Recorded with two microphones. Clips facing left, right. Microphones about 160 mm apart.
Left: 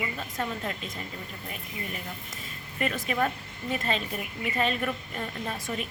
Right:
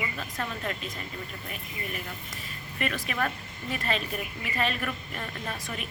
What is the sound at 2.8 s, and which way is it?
A woman's voice, 25° left (ahead or behind).